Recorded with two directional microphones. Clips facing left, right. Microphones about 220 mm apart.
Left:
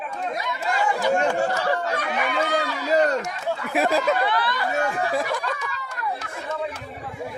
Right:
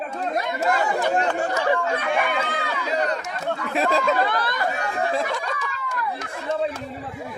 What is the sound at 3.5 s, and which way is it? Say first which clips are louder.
Speech: even; 5° left (ahead or behind).